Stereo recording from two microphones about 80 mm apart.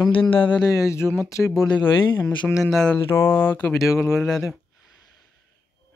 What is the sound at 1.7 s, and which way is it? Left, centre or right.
Speech, left.